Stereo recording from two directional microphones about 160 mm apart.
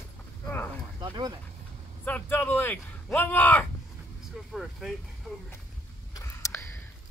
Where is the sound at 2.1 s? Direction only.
10° left (ahead or behind).